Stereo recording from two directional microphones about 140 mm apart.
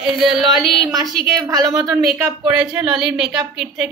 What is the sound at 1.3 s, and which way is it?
Speech, 25° right (ahead or behind).